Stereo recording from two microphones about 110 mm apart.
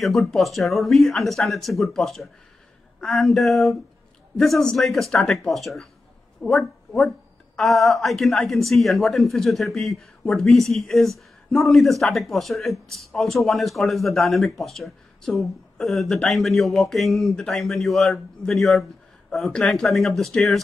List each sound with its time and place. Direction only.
0.0 s a woman's voice: centre (ahead or behind)